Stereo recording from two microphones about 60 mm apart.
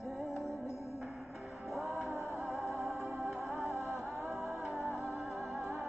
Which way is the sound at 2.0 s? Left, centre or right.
Left.